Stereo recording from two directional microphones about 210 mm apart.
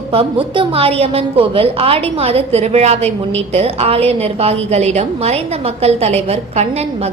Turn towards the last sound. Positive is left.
turn(degrees=-30)  # may be behind; listen again after turning